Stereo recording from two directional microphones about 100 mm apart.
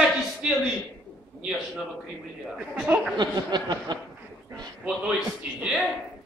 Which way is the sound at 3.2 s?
45° right (ahead or behind).